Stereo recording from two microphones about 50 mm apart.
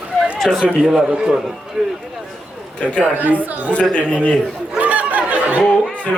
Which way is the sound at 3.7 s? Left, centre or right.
Left.